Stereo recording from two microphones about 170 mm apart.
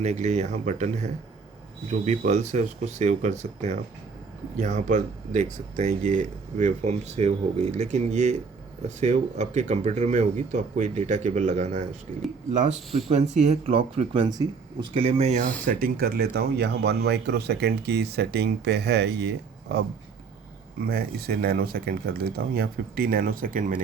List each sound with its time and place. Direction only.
0.0 s speech: 40° right (ahead or behind)
13.1 s speech: 40° right (ahead or behind)
15.6 s speech: 55° right (ahead or behind); by 19.8 s 85° right
20.8 s speech: 65° right (ahead or behind)